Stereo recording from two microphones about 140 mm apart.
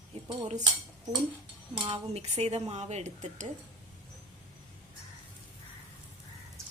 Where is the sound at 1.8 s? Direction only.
45° right (ahead or behind); by 3.5 s 60° right (ahead or behind).